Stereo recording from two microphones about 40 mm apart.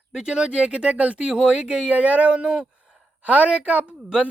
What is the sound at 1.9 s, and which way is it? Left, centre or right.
Speech, right.